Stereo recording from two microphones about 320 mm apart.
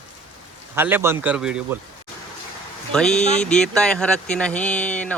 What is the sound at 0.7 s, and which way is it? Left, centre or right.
Speech, centre.